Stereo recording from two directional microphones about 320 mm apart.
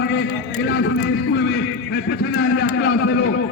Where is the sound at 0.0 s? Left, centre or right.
Left.